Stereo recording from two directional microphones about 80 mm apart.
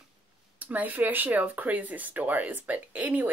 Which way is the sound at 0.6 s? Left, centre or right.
Right.